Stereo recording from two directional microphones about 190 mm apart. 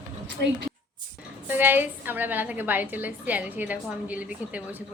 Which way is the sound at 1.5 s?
10° right (ahead or behind).